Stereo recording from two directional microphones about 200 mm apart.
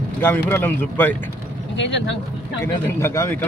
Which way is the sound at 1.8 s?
65° left (ahead or behind).